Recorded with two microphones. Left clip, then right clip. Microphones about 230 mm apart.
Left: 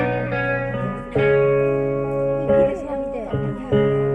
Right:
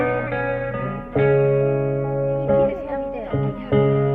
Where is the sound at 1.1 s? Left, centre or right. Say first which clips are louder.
Left 1 dB; left.